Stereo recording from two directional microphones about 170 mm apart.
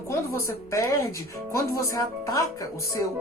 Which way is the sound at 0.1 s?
15° left (ahead or behind).